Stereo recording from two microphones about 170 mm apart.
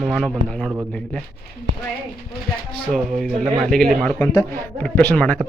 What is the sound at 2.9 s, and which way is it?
Speech, centre (ahead or behind).